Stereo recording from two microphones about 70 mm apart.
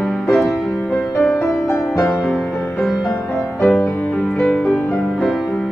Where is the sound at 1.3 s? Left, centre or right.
Left.